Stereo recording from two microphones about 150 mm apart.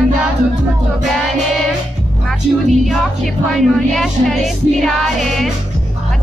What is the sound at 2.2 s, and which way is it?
A woman's voice, centre (ahead or behind).